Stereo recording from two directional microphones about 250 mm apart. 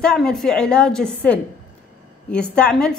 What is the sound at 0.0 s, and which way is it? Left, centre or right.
A woman's voice, centre.